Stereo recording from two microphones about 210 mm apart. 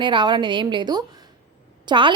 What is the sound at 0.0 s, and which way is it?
A woman's voice, 20° right (ahead or behind).